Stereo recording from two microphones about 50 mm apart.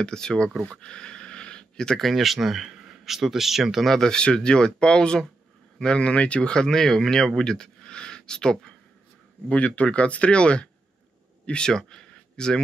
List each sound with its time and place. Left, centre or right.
0.0 s speech: centre
2.0 s speech: centre
3.8 s speech: centre